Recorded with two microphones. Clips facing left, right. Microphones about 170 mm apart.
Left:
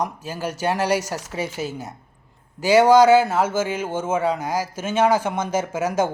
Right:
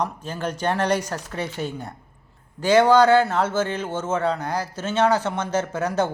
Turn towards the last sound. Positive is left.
turn(degrees=10)  # may be behind; listen again after turning